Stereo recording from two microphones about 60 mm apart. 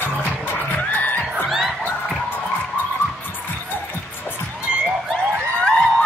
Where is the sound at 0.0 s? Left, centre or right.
Left.